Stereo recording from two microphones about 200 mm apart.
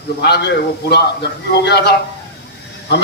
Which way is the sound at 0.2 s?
55° left (ahead or behind).